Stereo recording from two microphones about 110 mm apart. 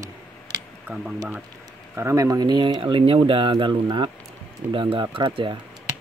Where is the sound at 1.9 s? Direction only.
25° right (ahead or behind); by 5.5 s 50° right (ahead or behind).